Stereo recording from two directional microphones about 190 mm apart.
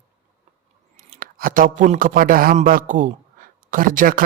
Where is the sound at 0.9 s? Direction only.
50° right (ahead or behind).